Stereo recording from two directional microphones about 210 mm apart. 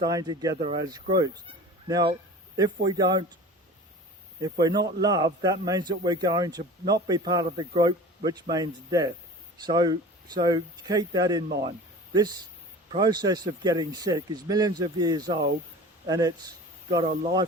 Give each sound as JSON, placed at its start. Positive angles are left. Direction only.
{"t": 0.0, "sound": "a man's voice", "side_deg": -20}
{"t": 4.4, "sound": "a man's voice", "side_deg": -20}